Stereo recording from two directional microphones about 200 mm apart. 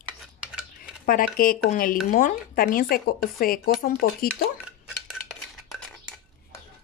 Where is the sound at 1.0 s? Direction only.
45° left (ahead or behind).